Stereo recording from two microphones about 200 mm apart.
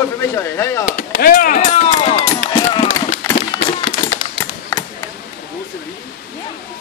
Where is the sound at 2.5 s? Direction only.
25° left (ahead or behind).